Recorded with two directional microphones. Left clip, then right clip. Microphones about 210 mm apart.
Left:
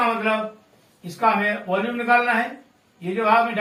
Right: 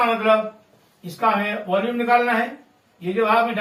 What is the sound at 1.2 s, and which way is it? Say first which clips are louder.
A man's voice: left 1 dB; centre (ahead or behind).